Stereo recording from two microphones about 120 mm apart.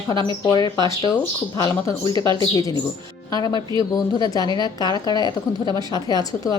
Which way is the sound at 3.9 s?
35° left (ahead or behind).